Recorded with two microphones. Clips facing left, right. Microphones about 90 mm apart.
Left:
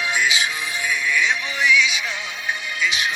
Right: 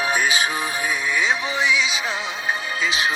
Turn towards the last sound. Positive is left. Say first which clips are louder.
# right 1 dB
turn(degrees=-30)  # may be behind; listen again after turning